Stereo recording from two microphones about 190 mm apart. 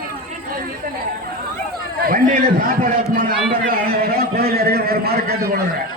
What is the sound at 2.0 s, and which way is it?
A man's voice, 50° right (ahead or behind).